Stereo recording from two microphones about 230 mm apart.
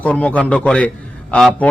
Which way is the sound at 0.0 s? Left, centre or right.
Centre.